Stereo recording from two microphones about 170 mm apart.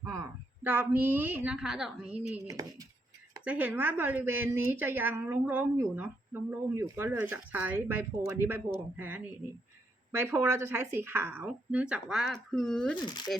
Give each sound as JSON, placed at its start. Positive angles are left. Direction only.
{"t": 0.0, "sound": "a woman's voice", "side_deg": -15}
{"t": 2.5, "sound": "speech", "side_deg": -20}
{"t": 3.4, "sound": "a woman's voice", "side_deg": -10}